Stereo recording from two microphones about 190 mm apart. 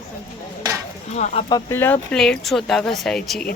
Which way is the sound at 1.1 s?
35° left (ahead or behind).